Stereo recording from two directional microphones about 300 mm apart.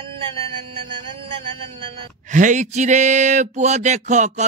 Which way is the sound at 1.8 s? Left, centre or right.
Right.